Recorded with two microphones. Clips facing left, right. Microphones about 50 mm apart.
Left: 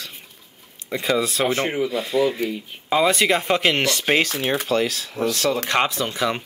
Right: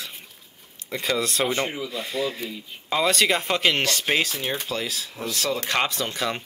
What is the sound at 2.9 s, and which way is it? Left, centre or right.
Speech, centre.